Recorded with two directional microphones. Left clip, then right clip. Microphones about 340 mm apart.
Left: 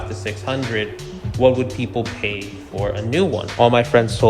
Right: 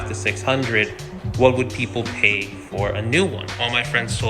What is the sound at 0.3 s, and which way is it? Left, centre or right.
Speech, centre.